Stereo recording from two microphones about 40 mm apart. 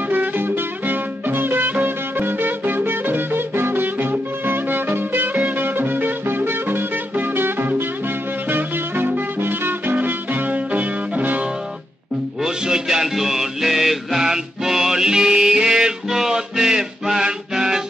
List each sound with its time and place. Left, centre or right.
0.1 s music: right
5.3 s music: right
5.8 s music: right
9.9 s music: right
10.7 s music: right
12.4 s music: centre